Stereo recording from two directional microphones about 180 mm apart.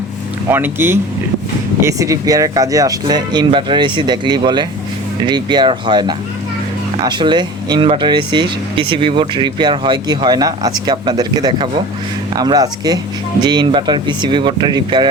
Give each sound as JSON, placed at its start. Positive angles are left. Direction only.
{"t": 0.5, "sound": "speech", "side_deg": -10}